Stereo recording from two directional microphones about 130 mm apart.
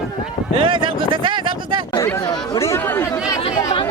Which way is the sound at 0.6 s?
40° right (ahead or behind).